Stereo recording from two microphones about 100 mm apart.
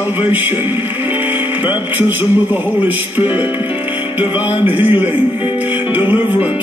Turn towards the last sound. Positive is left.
turn(degrees=-20)  # may be behind; listen again after turning